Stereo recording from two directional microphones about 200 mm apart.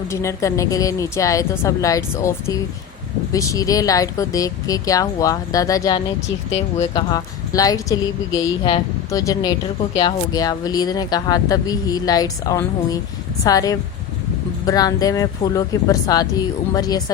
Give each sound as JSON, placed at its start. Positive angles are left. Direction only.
{"t": 0.1, "sound": "a woman's voice", "side_deg": 15}
{"t": 6.5, "sound": "speech", "side_deg": 30}
{"t": 7.1, "sound": "a woman's voice", "side_deg": 20}